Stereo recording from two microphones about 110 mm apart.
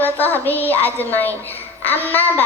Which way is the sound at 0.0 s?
15° left (ahead or behind).